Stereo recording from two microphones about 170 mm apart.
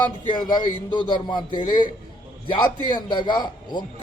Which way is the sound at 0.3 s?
25° left (ahead or behind).